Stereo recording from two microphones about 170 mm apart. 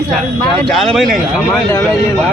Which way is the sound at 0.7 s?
Centre (ahead or behind).